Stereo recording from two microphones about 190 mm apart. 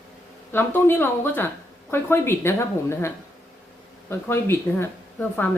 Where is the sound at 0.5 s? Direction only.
10° left (ahead or behind).